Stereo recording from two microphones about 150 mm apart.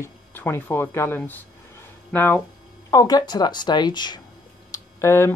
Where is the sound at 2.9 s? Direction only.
25° left (ahead or behind).